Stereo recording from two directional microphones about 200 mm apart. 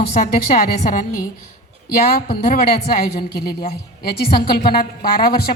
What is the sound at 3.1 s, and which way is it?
A woman's voice, 50° left (ahead or behind).